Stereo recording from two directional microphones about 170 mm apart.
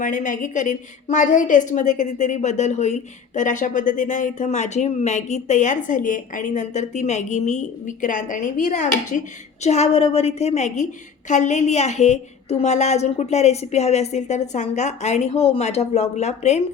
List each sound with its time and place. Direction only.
0.0 s a woman's voice: 50° left (ahead or behind)